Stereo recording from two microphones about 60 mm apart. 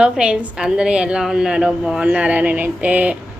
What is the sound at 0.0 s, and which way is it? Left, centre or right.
Speech, centre.